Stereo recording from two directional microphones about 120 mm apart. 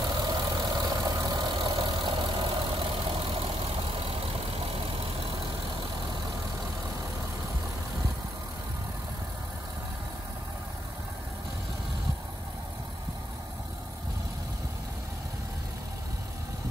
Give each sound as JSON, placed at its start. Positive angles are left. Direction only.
{"t": 0.2, "sound": "vehicle", "side_deg": -35}